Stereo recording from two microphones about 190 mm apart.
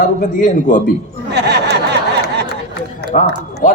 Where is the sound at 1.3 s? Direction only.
60° right (ahead or behind).